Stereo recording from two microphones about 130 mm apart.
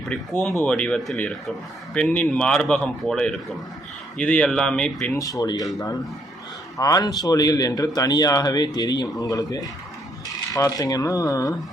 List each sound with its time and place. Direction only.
0.1 s speech: 5° left (ahead or behind)
5.1 s a man's voice: 25° left (ahead or behind)
6.7 s a man's voice: 30° left (ahead or behind)
10.2 s coin: 25° left (ahead or behind)